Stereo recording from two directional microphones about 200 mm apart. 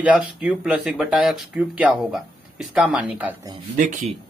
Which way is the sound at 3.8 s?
40° right (ahead or behind).